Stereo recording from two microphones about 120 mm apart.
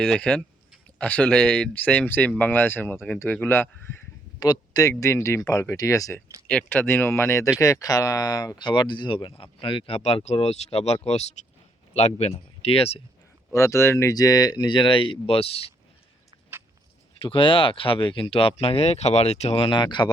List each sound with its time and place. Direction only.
0.0 s speech: 5° left (ahead or behind)
4.4 s speech: 30° left (ahead or behind)
6.5 s speech: 10° left (ahead or behind); by 13.0 s 55° left (ahead or behind)
13.5 s speech: 25° left (ahead or behind); by 15.7 s 55° left (ahead or behind)
17.2 s speech: 50° left (ahead or behind)